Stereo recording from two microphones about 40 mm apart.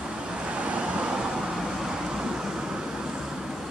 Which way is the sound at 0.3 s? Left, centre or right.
Right.